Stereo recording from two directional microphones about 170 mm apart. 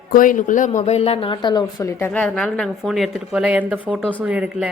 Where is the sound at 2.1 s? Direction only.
5° left (ahead or behind).